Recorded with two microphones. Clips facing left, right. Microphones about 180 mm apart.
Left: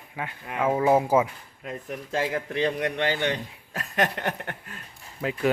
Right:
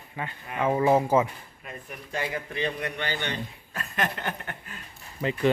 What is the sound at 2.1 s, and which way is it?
A man's voice, 90° left.